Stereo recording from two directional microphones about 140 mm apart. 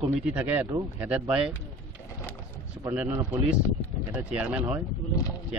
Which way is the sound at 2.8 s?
10° right (ahead or behind).